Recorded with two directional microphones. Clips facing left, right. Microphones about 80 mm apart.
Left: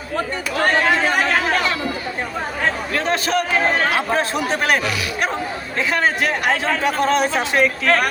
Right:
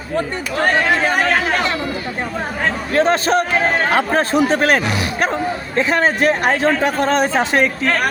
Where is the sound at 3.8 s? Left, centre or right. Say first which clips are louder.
Right 3 dB; right.